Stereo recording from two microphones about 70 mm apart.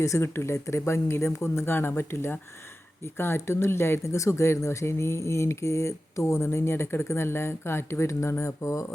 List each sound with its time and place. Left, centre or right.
0.0 s speech: left